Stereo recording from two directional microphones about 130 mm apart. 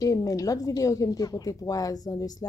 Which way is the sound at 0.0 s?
25° left (ahead or behind).